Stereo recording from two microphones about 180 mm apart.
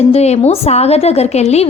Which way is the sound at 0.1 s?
35° left (ahead or behind).